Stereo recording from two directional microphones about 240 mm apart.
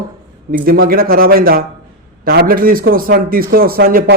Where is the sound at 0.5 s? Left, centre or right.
Right.